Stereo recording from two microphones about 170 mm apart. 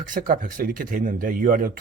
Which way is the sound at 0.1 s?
55° right (ahead or behind).